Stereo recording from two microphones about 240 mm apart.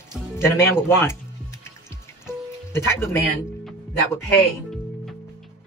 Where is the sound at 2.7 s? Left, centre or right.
Centre.